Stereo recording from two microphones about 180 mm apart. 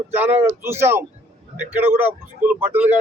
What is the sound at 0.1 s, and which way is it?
A man's voice, 10° right (ahead or behind).